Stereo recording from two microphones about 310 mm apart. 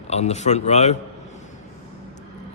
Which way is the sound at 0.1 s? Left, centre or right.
Left.